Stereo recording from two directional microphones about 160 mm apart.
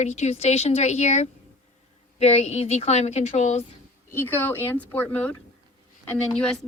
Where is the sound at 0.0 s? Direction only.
45° left (ahead or behind).